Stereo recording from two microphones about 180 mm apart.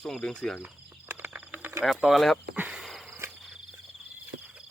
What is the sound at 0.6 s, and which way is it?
Cricket, 10° right (ahead or behind).